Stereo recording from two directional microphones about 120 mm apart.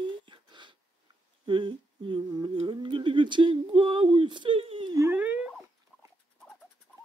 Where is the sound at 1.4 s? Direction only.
45° right (ahead or behind).